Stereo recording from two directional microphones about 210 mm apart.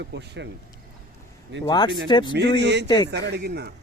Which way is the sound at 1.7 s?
20° left (ahead or behind).